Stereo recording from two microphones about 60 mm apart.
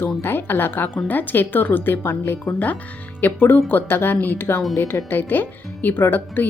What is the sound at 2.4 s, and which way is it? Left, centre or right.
Speech, left.